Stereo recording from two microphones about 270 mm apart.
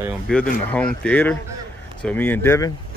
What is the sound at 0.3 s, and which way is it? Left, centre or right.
Speech, centre.